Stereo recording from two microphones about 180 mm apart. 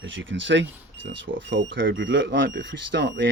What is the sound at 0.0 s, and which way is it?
Speech, 90° right.